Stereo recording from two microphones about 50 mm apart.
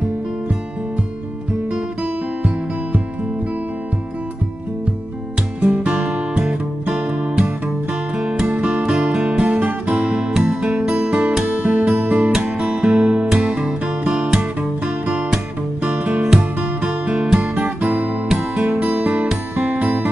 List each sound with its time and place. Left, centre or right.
5.6 s music: right
5.9 s music: centre
17.6 s music: right